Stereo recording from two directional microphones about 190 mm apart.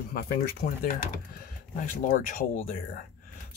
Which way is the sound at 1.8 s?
45° left (ahead or behind).